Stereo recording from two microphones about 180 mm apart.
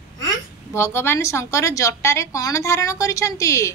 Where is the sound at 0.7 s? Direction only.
15° left (ahead or behind).